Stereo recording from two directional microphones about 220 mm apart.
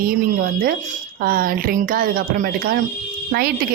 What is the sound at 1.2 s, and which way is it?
A woman's voice, 40° right (ahead or behind).